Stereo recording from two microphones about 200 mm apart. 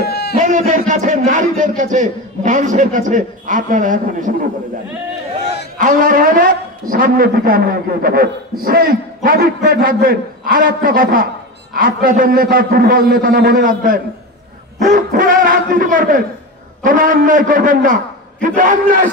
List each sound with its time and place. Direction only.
0.0 s a sound: 55° left (ahead or behind)
0.4 s music: 40° right (ahead or behind)
0.8 s a man's voice: 40° right (ahead or behind)
5.8 s a man's voice: 40° right (ahead or behind)